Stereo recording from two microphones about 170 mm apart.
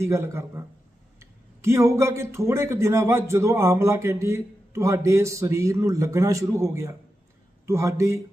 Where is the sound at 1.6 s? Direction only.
15° right (ahead or behind).